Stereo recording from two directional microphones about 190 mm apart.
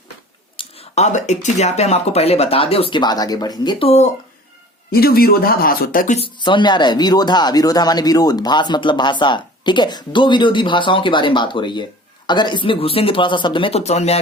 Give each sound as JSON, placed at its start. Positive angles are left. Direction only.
{"t": 0.5, "sound": "speech", "side_deg": 30}
{"t": 4.9, "sound": "speech", "side_deg": 55}
{"t": 6.1, "sound": "speech", "side_deg": 25}